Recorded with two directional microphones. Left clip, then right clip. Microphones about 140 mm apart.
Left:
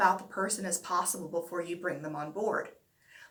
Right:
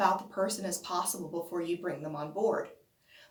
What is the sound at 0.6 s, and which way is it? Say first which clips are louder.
Speech: left 2 dB; 20° right (ahead or behind).